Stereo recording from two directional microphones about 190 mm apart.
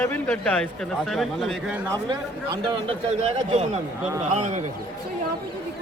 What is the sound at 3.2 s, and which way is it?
Speech, 35° right (ahead or behind).